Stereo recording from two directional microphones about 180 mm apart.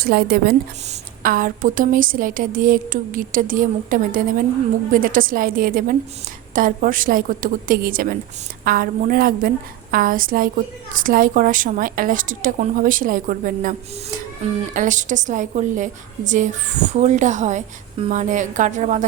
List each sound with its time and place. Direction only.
0.0 s a woman's voice: 60° right (ahead or behind)